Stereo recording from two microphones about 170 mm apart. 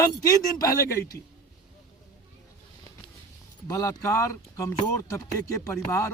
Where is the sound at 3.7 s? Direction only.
20° left (ahead or behind).